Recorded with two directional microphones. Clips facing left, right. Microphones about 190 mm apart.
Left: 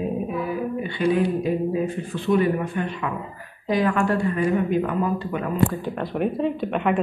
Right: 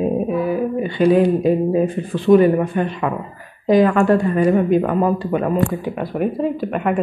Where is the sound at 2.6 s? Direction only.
55° right (ahead or behind).